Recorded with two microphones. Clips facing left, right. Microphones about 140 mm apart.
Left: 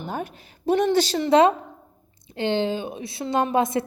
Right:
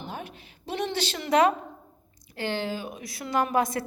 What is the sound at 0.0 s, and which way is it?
A woman's voice, 45° left (ahead or behind).